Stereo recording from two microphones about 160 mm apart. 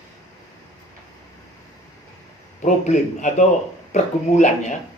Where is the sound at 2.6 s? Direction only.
45° left (ahead or behind).